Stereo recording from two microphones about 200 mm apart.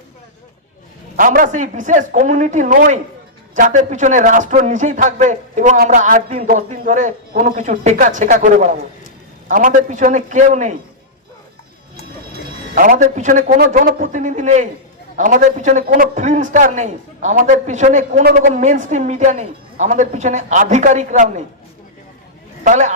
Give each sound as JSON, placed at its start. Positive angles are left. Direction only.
{"t": 1.1, "sound": "speech", "side_deg": -45}
{"t": 12.7, "sound": "speech", "side_deg": -40}
{"t": 18.3, "sound": "speech", "side_deg": -55}
{"t": 18.5, "sound": "speech", "side_deg": -35}
{"t": 22.6, "sound": "speech", "side_deg": -35}